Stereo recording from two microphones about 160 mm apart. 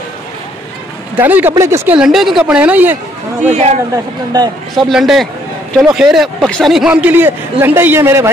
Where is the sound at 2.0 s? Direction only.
Centre (ahead or behind).